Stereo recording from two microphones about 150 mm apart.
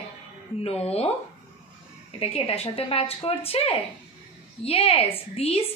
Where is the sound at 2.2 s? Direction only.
40° left (ahead or behind).